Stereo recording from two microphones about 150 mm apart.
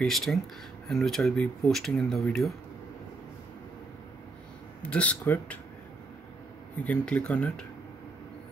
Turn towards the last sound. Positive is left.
turn(degrees=10)  # may be behind; listen again after turning